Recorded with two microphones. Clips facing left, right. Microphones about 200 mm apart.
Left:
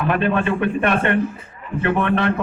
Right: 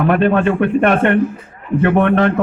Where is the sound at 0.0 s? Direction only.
50° right (ahead or behind).